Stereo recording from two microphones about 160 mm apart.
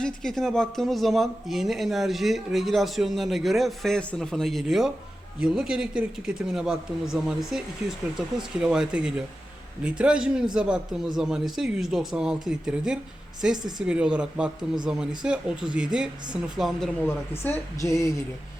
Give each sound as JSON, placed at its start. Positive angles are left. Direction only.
{"t": 0.0, "sound": "speech", "side_deg": 5}
{"t": 17.4, "sound": "speech", "side_deg": 15}